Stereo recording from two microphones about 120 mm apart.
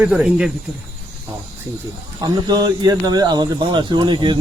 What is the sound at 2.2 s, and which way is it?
Speech, 35° right (ahead or behind).